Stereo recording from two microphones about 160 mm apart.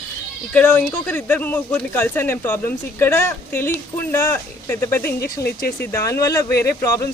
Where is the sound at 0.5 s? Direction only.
10° left (ahead or behind).